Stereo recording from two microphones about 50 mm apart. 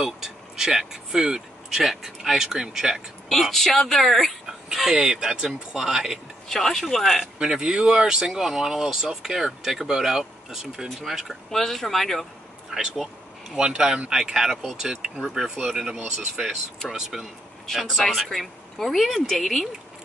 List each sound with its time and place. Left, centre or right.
0.0 s speech: centre
3.3 s speech: centre
4.9 s speech: centre
6.5 s speech: centre
7.3 s speech: centre
12.7 s speech: centre
17.6 s speech: centre